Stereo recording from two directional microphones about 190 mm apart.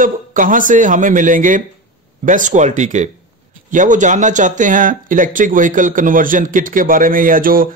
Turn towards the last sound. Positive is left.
turn(degrees=-50)  # may be behind; listen again after turning